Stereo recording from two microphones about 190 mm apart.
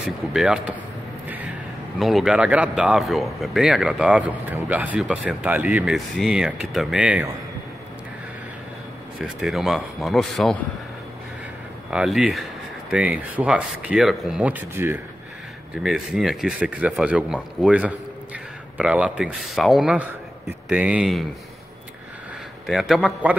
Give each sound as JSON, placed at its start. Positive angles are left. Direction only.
{"t": 0.3, "sound": "speech", "side_deg": -5}
{"t": 2.0, "sound": "speech", "side_deg": 0}
{"t": 9.2, "sound": "speech", "side_deg": 0}
{"t": 11.9, "sound": "speech", "side_deg": -5}
{"t": 22.7, "sound": "speech", "side_deg": 0}